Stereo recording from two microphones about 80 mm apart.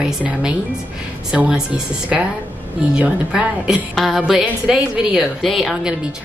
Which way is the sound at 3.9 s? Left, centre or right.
Centre.